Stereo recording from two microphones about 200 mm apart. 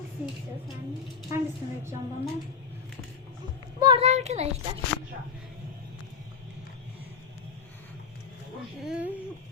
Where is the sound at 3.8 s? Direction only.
25° right (ahead or behind).